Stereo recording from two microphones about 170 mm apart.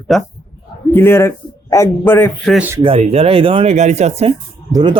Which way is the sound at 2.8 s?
35° right (ahead or behind).